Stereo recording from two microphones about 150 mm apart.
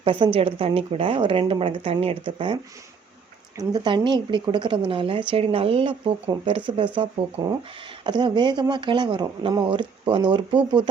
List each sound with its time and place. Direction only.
0.0 s a woman's voice: 35° right (ahead or behind)
3.6 s a woman's voice: 30° right (ahead or behind)